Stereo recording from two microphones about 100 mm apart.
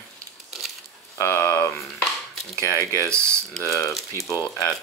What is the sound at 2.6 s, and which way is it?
Speech, 30° left (ahead or behind).